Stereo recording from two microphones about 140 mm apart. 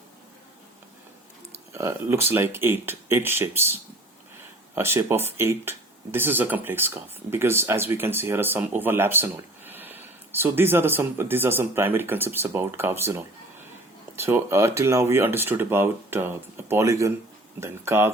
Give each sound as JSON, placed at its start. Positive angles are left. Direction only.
{"t": 1.7, "sound": "speech", "side_deg": -20}